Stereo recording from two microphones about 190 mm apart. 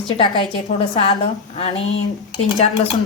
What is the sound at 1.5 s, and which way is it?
Speech, 35° left (ahead or behind).